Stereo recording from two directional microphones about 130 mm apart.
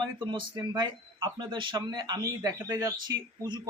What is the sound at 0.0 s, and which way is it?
A man's voice, 40° right (ahead or behind).